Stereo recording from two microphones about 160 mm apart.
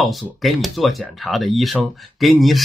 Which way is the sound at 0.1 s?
Centre (ahead or behind).